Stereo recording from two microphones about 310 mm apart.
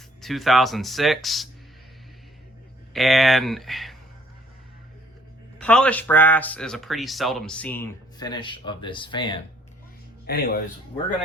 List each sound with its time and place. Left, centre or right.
0.2 s speech: centre
2.9 s speech: centre
5.5 s speech: centre
10.2 s speech: left